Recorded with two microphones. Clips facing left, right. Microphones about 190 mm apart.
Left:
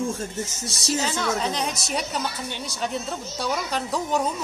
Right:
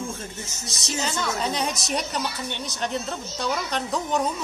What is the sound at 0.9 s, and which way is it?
Speech, centre (ahead or behind).